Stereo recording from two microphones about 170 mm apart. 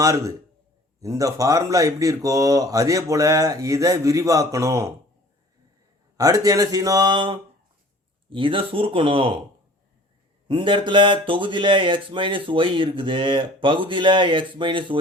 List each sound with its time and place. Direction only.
0.0 s speech: 20° right (ahead or behind)
6.1 s speech: 20° right (ahead or behind)
10.5 s speech: 30° right (ahead or behind)